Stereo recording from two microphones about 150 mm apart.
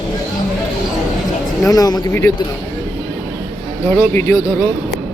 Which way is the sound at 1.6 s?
25° left (ahead or behind).